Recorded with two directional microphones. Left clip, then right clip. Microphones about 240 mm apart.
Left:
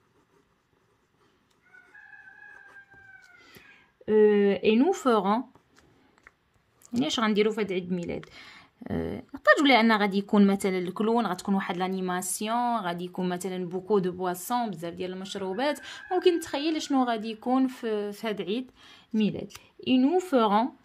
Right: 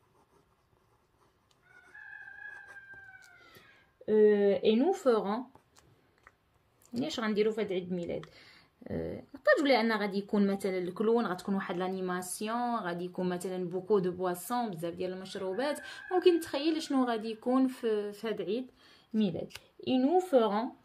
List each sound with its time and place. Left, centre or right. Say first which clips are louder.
4.0 s speech: left 4 dB; left
7.1 s speech: left 5 dB; left